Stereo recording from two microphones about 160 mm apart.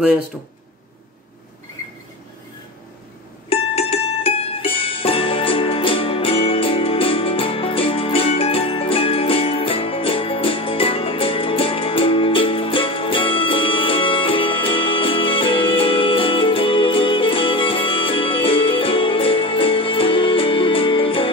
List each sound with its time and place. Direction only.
3.4 s music: 35° left (ahead or behind)